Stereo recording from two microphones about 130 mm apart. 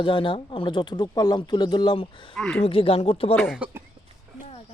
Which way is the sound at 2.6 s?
45° left (ahead or behind).